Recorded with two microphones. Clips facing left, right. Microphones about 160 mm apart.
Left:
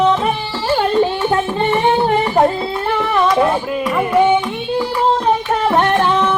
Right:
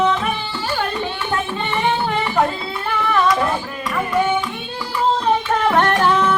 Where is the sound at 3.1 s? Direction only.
25° left (ahead or behind).